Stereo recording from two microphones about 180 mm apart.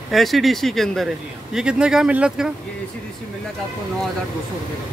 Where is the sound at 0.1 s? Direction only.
Centre (ahead or behind).